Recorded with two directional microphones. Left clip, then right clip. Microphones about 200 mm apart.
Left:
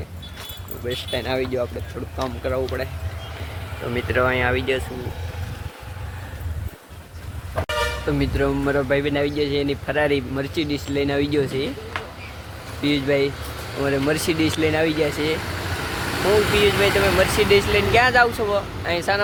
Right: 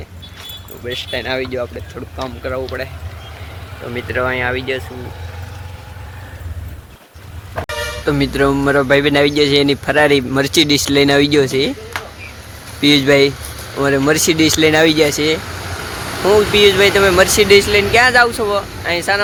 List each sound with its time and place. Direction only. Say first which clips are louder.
0.9 s speech: right 4 dB; 5° left (ahead or behind)
3.9 s speech: right 2 dB; centre (ahead or behind)
8.0 s speech: right 7 dB; 25° right (ahead or behind)
12.8 s speech: right 10 dB; 40° right (ahead or behind)
13.8 s speech: right 8 dB; 25° right (ahead or behind)
15.7 s vehicle: right 2 dB; 50° left (ahead or behind)
16.6 s speech: right 8 dB; 30° right (ahead or behind)